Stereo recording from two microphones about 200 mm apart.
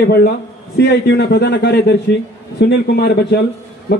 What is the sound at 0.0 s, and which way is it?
A man's voice, 50° left (ahead or behind).